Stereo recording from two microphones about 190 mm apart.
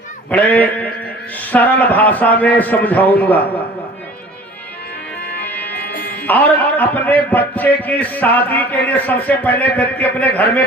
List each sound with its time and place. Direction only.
0.3 s a man's voice: 10° left (ahead or behind)
5.4 s music: 10° left (ahead or behind)
5.7 s music: 55° left (ahead or behind)
6.2 s a man's voice: 10° left (ahead or behind)